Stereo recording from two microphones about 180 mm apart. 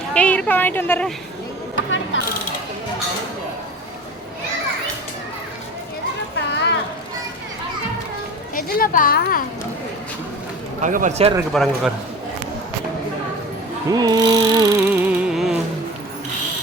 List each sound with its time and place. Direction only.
0.1 s a woman's voice: 5° left (ahead or behind)
6.5 s a sound: 75° left (ahead or behind)
8.5 s a woman's voice: 50° left (ahead or behind)
10.8 s speech: 45° right (ahead or behind)
11.5 s a man's voice: centre (ahead or behind)
13.9 s mechanisms: 20° right (ahead or behind); by 15.5 s centre (ahead or behind)